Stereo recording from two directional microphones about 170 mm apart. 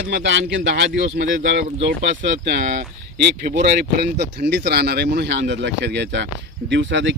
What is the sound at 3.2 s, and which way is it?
A man's voice, 80° right.